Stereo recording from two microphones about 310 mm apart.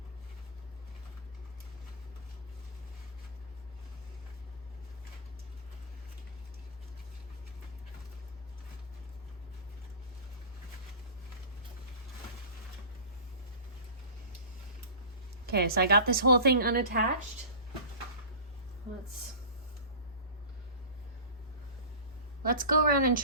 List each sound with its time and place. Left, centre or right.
15.4 s a woman's voice: right
22.4 s a woman's voice: right